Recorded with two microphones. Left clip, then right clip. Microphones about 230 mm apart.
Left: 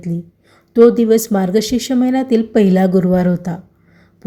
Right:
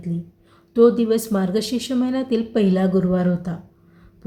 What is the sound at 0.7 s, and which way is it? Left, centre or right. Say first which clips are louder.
Speech: left 6 dB; left.